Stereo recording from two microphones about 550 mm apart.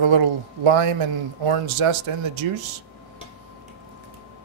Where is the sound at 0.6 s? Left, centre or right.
Right.